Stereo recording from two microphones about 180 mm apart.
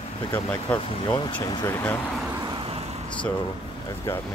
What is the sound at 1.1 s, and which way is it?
Speech, 25° left (ahead or behind).